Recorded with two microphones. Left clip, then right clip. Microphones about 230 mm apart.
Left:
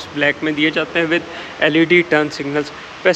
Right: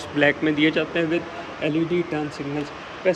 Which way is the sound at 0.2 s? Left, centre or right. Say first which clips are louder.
Left 3 dB; centre.